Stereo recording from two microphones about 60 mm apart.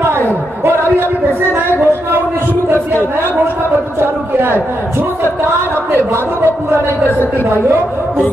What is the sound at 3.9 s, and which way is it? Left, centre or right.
A man's voice, right.